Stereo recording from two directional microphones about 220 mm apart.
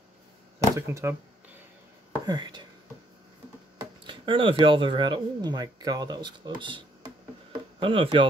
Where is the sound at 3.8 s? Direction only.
20° right (ahead or behind).